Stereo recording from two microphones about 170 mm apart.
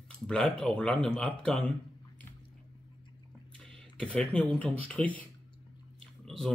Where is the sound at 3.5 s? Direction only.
5° left (ahead or behind).